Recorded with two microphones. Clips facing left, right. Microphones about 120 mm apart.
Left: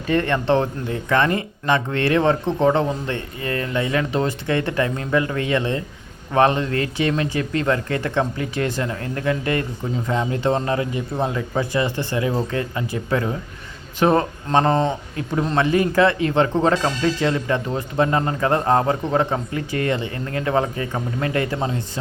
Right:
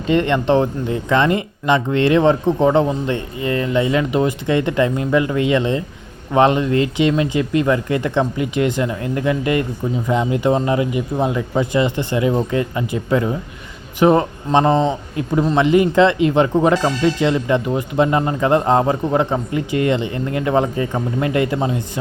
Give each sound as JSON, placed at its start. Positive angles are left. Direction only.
{"t": 0.1, "sound": "speech", "side_deg": -20}